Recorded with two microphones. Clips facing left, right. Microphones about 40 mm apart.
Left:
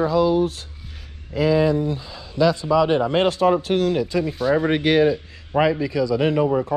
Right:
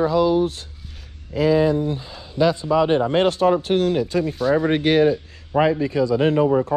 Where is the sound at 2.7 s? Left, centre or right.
Left.